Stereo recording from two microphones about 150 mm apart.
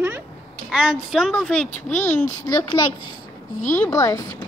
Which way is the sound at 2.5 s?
25° left (ahead or behind).